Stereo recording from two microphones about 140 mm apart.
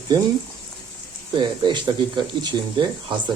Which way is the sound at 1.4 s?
35° right (ahead or behind).